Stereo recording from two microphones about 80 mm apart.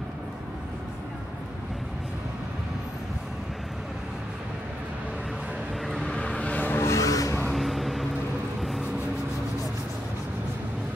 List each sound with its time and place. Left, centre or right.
5.9 s vehicle: centre
6.9 s vehicle: left
7.4 s vehicle: centre